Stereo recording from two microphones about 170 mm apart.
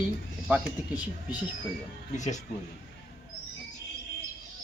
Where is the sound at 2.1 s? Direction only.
45° left (ahead or behind).